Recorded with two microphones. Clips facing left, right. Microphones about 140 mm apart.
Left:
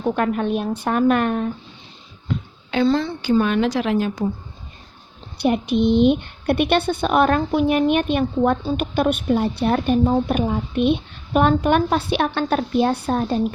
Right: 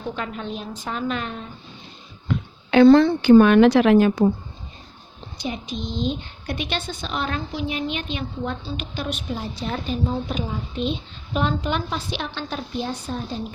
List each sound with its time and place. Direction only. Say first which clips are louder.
0.0 s a woman's voice: left 9 dB; 55° left (ahead or behind)
2.2 s a woman's voice: even; 65° right (ahead or behind)
5.4 s a woman's voice: left 11 dB; 65° left (ahead or behind)